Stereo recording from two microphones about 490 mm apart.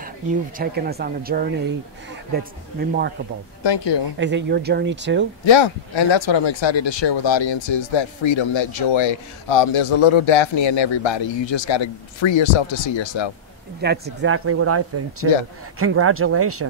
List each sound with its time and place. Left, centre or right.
0.6 s speech: centre
3.6 s speech: left
4.2 s speech: right
5.4 s speech: left
13.7 s speech: centre